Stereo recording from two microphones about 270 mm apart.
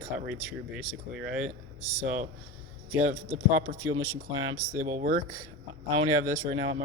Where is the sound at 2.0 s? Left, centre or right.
Right.